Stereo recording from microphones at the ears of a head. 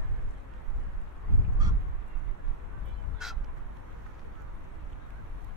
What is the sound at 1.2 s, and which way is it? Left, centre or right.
Goose, left.